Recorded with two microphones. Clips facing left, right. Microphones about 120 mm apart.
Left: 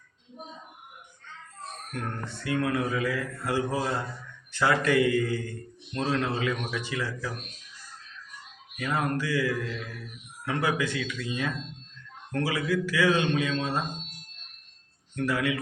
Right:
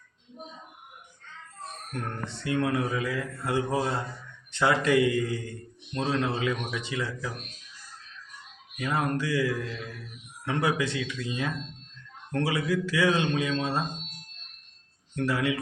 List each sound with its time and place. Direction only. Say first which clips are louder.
1.9 s a man's voice: even; 25° right (ahead or behind)
8.8 s a man's voice: even; 25° right (ahead or behind)
12.3 s a man's voice: even; 25° right (ahead or behind)
15.1 s speech: even; 25° right (ahead or behind)